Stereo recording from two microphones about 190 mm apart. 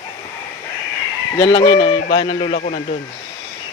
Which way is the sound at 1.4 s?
20° left (ahead or behind).